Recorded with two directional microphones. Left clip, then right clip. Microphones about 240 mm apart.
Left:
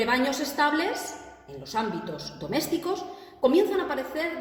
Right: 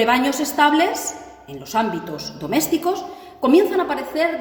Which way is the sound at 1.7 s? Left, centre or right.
Right.